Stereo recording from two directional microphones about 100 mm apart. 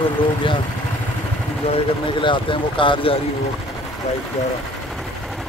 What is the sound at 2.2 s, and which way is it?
Speech, 55° left (ahead or behind).